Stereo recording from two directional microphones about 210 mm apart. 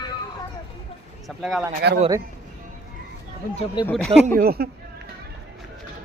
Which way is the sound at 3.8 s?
Centre (ahead or behind).